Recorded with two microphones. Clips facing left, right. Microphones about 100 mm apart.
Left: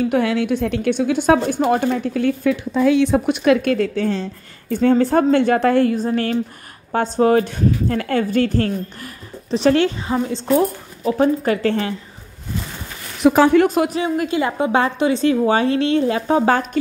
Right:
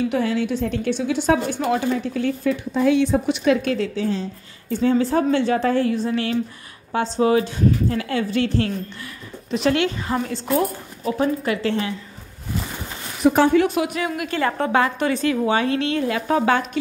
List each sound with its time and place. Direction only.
0.1 s a woman's voice: 65° left (ahead or behind); by 8.7 s 45° left (ahead or behind)
9.5 s speech: 35° left (ahead or behind)
10.0 s a woman's voice: 15° left (ahead or behind)
11.1 s speech: 40° left (ahead or behind)
13.2 s a woman's voice: 90° left
13.7 s speech: 35° left (ahead or behind)
14.3 s a woman's voice: 15° left (ahead or behind)
15.4 s speech: 30° left (ahead or behind)
16.8 s a woman's voice: 45° left (ahead or behind)